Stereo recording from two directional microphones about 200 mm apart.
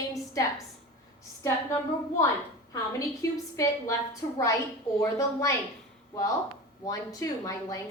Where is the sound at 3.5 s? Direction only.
15° left (ahead or behind).